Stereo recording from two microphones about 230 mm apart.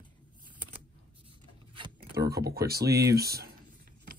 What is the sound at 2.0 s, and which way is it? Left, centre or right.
Speech, right.